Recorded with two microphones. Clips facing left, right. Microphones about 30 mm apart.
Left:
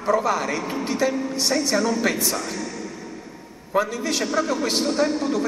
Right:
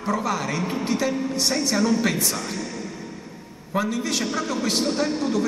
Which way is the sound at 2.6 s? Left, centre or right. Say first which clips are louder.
Left 1 dB; centre.